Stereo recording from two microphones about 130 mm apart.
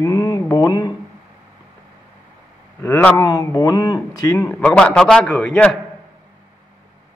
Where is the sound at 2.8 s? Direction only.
20° left (ahead or behind).